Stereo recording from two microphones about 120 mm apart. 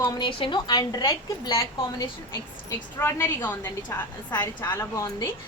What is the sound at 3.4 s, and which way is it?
A woman's voice, 15° left (ahead or behind).